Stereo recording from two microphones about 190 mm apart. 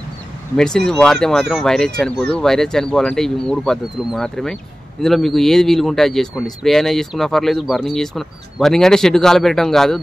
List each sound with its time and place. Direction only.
0.6 s speech: 5° left (ahead or behind)